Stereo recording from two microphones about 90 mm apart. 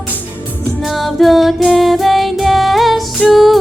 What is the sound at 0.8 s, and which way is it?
Music, centre (ahead or behind).